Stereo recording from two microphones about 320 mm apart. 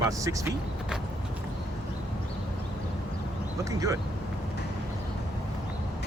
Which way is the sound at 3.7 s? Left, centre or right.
Centre.